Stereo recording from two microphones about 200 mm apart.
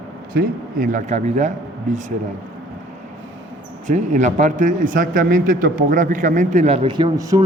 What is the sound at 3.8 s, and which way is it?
A man's voice, 40° right (ahead or behind).